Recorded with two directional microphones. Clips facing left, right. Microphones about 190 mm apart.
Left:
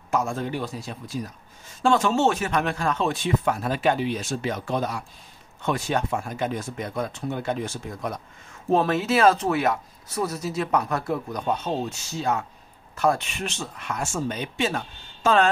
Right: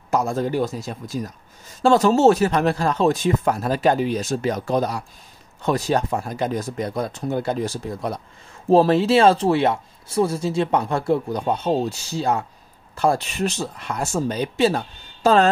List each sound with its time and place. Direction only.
0.1 s speech: 40° right (ahead or behind)